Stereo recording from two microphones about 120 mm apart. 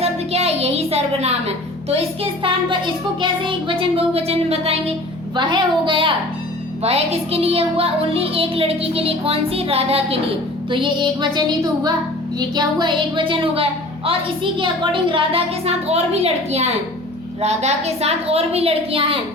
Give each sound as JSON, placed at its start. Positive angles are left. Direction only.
{"t": 0.0, "sound": "a woman's voice", "side_deg": -60}
{"t": 5.4, "sound": "a woman's voice", "side_deg": -40}
{"t": 6.8, "sound": "a woman's voice", "side_deg": -60}
{"t": 10.7, "sound": "music", "side_deg": -40}
{"t": 12.4, "sound": "a woman's voice", "side_deg": -35}